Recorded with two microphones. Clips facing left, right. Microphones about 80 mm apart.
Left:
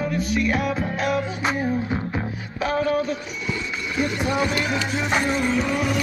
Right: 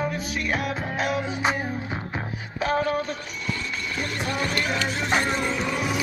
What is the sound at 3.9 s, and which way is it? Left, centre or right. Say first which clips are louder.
Music: left 7 dB; centre.